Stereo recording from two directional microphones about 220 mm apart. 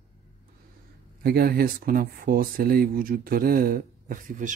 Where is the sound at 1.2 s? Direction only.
45° right (ahead or behind).